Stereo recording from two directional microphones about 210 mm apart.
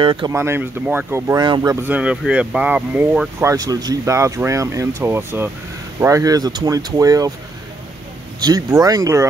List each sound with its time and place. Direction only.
0.0 s speech: 25° right (ahead or behind)
0.3 s speech: 10° right (ahead or behind)
8.4 s speech: 15° right (ahead or behind)